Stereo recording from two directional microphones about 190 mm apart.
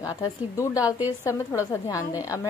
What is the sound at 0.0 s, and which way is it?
Speech, 20° left (ahead or behind).